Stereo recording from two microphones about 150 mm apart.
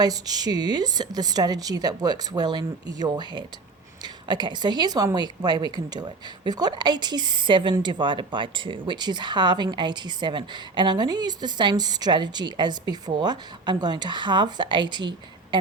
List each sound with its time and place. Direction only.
0.0 s speech: 25° right (ahead or behind)